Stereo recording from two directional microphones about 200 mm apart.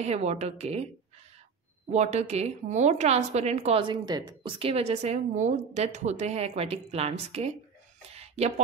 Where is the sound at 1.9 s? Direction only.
35° right (ahead or behind).